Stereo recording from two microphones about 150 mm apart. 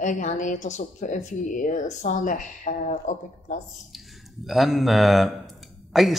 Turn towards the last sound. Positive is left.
turn(degrees=0)  # may be behind; listen again after turning